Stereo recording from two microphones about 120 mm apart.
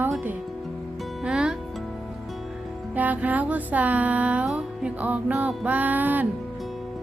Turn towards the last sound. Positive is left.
turn(degrees=-15)  # may be behind; listen again after turning